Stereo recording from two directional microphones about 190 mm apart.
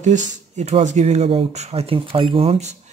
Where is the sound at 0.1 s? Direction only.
40° right (ahead or behind).